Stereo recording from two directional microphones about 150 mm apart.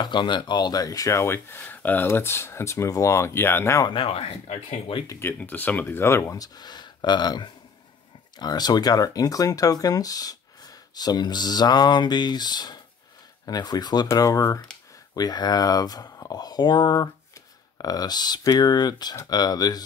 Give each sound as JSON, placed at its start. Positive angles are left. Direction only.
{"t": 0.0, "sound": "speech", "side_deg": 30}
{"t": 3.9, "sound": "speech", "side_deg": 35}
{"t": 5.0, "sound": "speech", "side_deg": 20}
{"t": 5.4, "sound": "speech", "side_deg": 10}